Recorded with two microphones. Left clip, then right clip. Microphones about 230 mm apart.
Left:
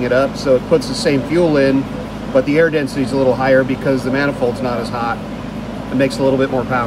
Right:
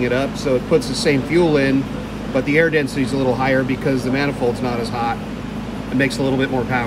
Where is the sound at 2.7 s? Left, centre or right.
Right.